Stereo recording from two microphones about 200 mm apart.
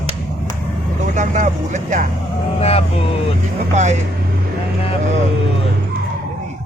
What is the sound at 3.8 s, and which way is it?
Speech, 35° right (ahead or behind).